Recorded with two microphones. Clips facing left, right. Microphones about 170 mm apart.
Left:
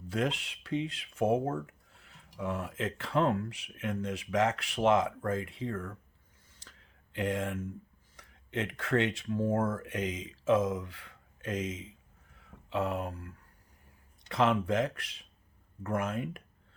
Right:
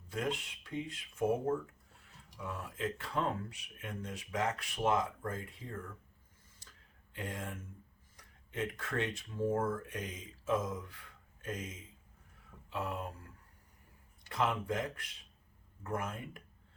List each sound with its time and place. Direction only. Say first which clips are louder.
0.1 s speech: left 5 dB; 90° left
6.5 s a sound: left 5 dB; 90° left
8.1 s speech: left 7 dB; 90° left